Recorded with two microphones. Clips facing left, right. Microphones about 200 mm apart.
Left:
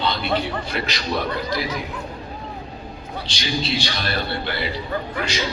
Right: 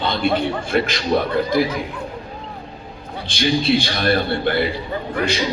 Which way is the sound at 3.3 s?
55° right (ahead or behind).